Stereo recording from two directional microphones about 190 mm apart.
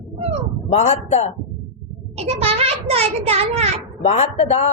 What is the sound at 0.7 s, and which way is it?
Speech, 35° left (ahead or behind).